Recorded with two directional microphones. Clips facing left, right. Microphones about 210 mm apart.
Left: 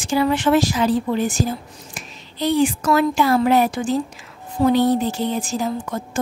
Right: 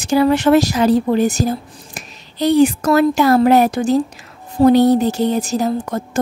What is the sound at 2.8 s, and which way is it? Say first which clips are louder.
A woman's voice: right 4 dB; 40° right (ahead or behind).